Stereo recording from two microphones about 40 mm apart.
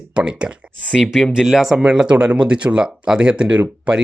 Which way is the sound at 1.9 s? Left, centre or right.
Right.